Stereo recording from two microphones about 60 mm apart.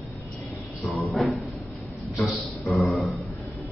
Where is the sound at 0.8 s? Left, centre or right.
Centre.